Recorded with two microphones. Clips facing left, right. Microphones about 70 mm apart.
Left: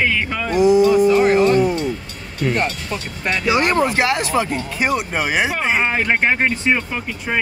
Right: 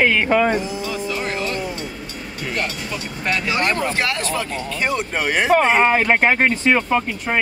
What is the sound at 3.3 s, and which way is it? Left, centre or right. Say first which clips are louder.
Speech: left 5 dB; centre.